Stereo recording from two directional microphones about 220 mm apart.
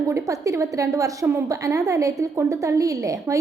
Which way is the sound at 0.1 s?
15° right (ahead or behind).